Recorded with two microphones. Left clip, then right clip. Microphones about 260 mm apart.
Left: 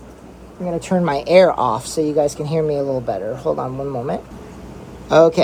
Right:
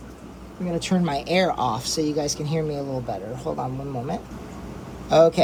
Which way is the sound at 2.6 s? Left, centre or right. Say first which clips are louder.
Left 12 dB; left.